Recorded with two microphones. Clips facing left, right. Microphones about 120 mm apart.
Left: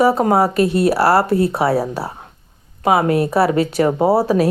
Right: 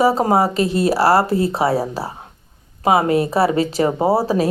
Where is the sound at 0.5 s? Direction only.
60° left (ahead or behind).